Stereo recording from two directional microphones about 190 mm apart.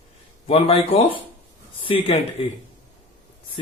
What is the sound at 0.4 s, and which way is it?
Speech, 30° left (ahead or behind).